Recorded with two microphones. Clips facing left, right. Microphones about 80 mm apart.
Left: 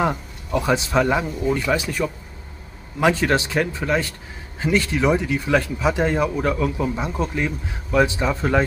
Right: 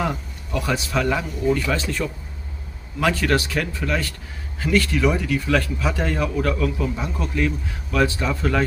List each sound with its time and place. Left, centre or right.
0.0 s speech: left